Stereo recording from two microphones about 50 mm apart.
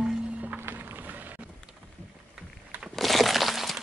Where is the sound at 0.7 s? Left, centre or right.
Right.